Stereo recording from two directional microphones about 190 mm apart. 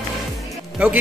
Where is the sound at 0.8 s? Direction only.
5° right (ahead or behind).